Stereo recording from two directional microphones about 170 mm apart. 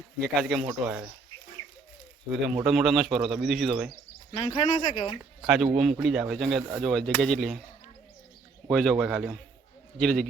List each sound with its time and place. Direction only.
0.2 s speech: centre (ahead or behind)
2.3 s speech: 5° right (ahead or behind)
4.3 s speech: 30° left (ahead or behind)
5.7 s speech: centre (ahead or behind)
8.7 s speech: centre (ahead or behind)